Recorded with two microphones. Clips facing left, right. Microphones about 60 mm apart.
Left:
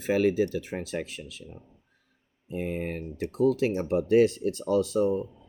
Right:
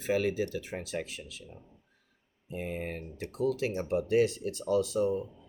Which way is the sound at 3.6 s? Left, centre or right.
Left.